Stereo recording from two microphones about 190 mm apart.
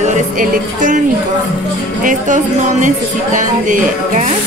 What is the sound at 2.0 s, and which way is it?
A woman's voice, 45° right (ahead or behind).